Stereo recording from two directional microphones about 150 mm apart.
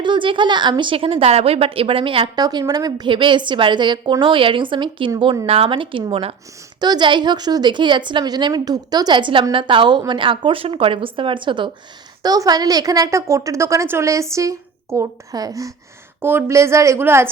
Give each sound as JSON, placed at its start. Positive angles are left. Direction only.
{"t": 0.0, "sound": "a woman's voice", "side_deg": -35}
{"t": 6.7, "sound": "a woman's voice", "side_deg": -30}